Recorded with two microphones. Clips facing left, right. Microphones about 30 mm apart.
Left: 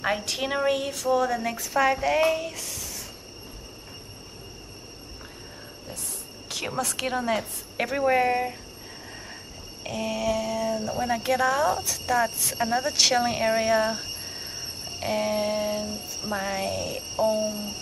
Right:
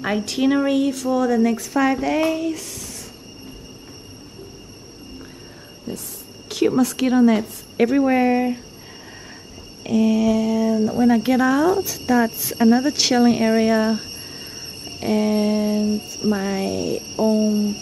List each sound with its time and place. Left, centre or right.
0.0 s speech: centre
5.9 s cricket: centre
6.5 s speech: centre
9.8 s speech: centre
17.1 s a sound: centre